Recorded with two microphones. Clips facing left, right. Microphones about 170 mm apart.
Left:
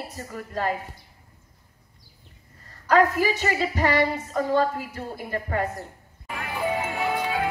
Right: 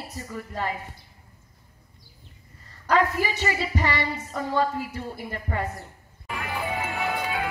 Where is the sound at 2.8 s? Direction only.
45° left (ahead or behind).